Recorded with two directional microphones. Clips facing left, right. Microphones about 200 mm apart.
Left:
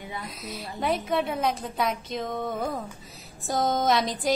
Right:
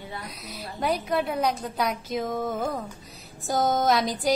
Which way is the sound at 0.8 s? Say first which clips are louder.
Even; centre (ahead or behind).